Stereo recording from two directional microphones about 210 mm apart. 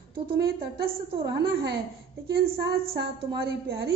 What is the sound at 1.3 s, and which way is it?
A woman's voice, 50° right (ahead or behind).